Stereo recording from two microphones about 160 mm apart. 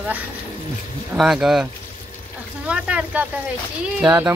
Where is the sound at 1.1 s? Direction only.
5° right (ahead or behind).